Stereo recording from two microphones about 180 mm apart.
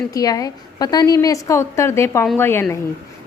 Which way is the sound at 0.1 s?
20° left (ahead or behind).